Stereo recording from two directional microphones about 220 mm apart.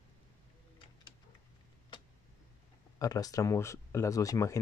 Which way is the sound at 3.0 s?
15° left (ahead or behind).